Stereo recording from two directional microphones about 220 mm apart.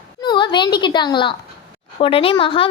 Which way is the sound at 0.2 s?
20° left (ahead or behind).